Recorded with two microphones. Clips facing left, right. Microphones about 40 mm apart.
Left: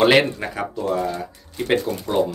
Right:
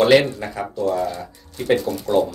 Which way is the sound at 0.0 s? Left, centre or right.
Left.